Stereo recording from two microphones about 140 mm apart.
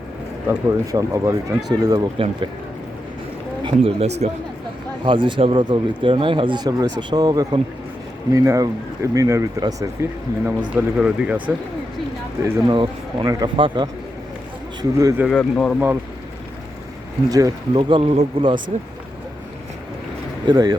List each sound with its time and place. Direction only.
0.4 s speech: 25° right (ahead or behind)
2.1 s speech: 40° right (ahead or behind)
3.6 s speech: 35° right (ahead or behind)
4.0 s speech: 50° right (ahead or behind)
5.0 s speech: 35° right (ahead or behind); by 10.5 s 20° right (ahead or behind)
10.8 s speech: 10° right (ahead or behind)
12.6 s speech: 35° right (ahead or behind)
14.8 s speech: 25° right (ahead or behind)
15.3 s speech: 5° left (ahead or behind)
17.2 s speech: 25° right (ahead or behind); by 18.5 s 45° right (ahead or behind)
20.5 s speech: 30° right (ahead or behind)